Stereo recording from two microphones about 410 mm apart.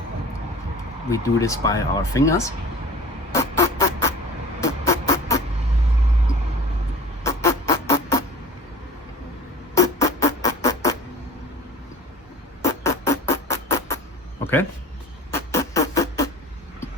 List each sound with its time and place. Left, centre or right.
1.1 s speech: centre
3.3 s a sound: centre
4.6 s music: centre
7.3 s music: centre
9.7 s music: centre
12.6 s music: centre
14.4 s a sound: centre
15.3 s music: centre